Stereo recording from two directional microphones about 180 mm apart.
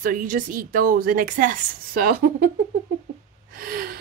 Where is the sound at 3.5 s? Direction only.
55° right (ahead or behind).